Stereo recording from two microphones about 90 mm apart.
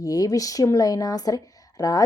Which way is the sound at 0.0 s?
45° left (ahead or behind).